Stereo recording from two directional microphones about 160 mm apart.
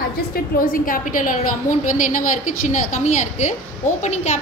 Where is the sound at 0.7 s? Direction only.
60° left (ahead or behind).